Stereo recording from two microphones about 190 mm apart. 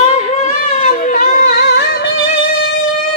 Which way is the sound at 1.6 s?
60° left (ahead or behind).